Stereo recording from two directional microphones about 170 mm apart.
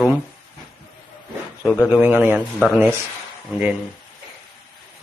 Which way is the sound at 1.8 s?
10° right (ahead or behind).